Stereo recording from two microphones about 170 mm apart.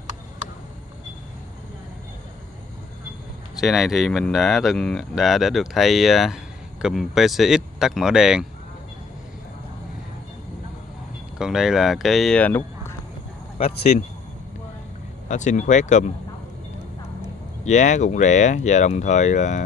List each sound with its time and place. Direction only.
3.6 s speech: centre (ahead or behind)
11.3 s speech: 5° right (ahead or behind)
13.6 s speech: 40° left (ahead or behind)
15.2 s speech: 45° left (ahead or behind)
17.6 s speech: 45° left (ahead or behind)